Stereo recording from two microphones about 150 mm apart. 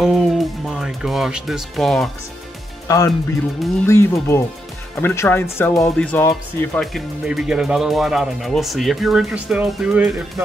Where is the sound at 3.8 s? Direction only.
20° left (ahead or behind).